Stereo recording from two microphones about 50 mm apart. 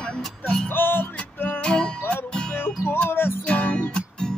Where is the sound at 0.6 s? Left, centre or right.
Left.